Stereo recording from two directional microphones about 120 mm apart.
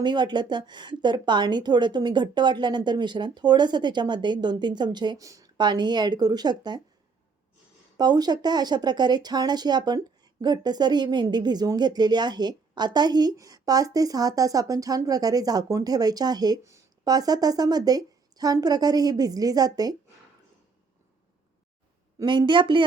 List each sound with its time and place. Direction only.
0.0 s speech: 40° right (ahead or behind)
7.9 s speech: 35° right (ahead or behind)
22.2 s speech: 40° right (ahead or behind)